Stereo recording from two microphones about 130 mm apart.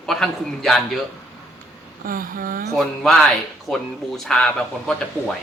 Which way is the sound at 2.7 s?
Centre (ahead or behind).